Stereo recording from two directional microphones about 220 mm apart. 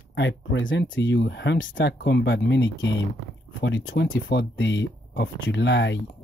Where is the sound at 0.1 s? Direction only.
55° left (ahead or behind).